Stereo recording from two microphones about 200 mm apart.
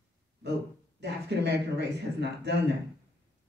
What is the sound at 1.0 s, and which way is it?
Speech, 55° right (ahead or behind).